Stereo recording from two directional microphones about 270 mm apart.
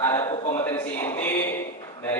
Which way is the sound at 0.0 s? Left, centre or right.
Centre.